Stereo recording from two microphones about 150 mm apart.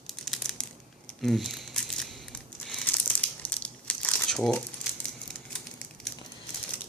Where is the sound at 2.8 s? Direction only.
10° left (ahead or behind).